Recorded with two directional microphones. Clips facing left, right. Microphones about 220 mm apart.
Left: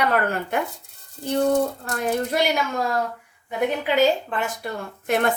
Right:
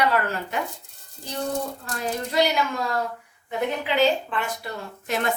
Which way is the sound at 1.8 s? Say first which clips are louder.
Left 5 dB; 55° left (ahead or behind).